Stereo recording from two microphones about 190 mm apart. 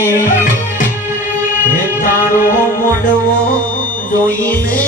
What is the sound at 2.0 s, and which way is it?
Music, 45° left (ahead or behind).